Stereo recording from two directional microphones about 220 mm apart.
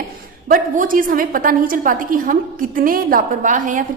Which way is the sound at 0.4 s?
40° right (ahead or behind).